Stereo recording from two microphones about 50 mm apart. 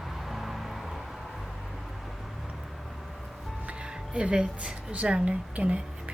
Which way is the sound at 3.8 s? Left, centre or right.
Centre.